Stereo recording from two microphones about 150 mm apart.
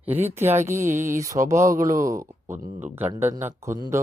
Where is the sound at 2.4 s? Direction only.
60° right (ahead or behind).